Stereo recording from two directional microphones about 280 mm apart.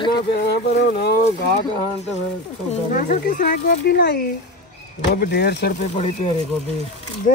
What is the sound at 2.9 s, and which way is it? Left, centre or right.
Speech, left.